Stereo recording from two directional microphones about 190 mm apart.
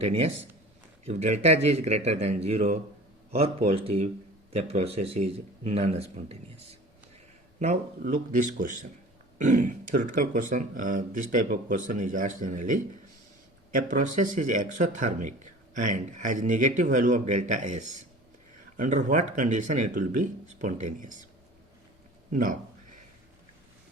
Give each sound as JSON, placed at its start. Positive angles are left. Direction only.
{"t": 0.0, "sound": "speech", "side_deg": -35}
{"t": 22.3, "sound": "a man's voice", "side_deg": -45}